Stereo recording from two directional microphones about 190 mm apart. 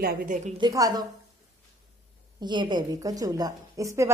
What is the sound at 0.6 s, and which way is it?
Speech, 20° right (ahead or behind).